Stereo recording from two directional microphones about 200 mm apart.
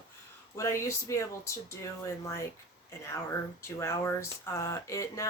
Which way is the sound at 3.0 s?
15° left (ahead or behind).